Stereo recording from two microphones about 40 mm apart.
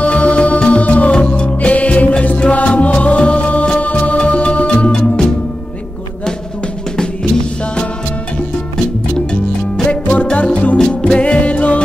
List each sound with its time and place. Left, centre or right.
0.0 s music: left
7.0 s music: centre
9.8 s music: left
10.9 s music: left